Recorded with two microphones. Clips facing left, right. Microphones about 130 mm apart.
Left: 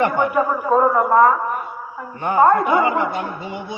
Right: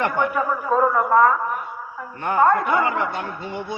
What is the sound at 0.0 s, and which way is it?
Speech, 10° left (ahead or behind).